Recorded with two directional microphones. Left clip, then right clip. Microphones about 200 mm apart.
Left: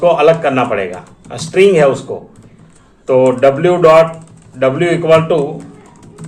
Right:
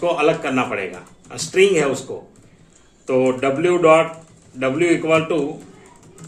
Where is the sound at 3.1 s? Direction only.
15° right (ahead or behind).